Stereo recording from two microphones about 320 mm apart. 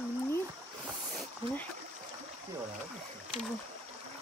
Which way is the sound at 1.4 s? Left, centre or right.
Centre.